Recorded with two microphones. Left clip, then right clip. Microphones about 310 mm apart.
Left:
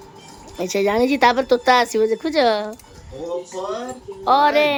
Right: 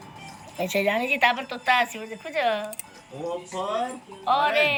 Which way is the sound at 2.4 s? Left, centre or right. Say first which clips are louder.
Left 6 dB; left.